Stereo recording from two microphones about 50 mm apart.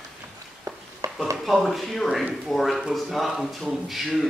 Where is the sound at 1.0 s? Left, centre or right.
Right.